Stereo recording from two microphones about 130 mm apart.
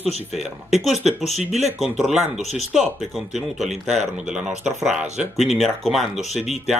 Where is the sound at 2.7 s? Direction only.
Centre (ahead or behind).